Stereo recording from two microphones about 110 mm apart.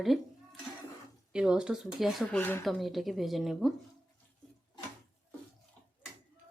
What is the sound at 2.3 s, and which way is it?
Speech, 15° left (ahead or behind).